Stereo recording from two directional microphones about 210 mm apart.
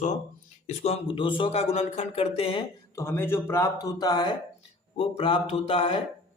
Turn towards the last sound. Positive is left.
turn(degrees=25)  # may be behind; listen again after turning